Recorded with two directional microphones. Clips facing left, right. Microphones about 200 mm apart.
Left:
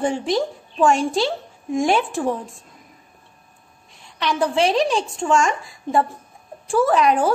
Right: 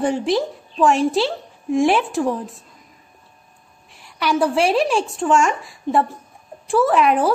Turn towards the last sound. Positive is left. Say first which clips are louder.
# right 1 dB
turn(degrees=0)  # may be behind; listen again after turning